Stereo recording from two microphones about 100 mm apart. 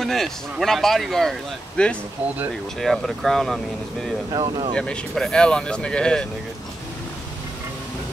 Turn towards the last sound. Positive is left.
turn(degrees=10)  # may be behind; listen again after turning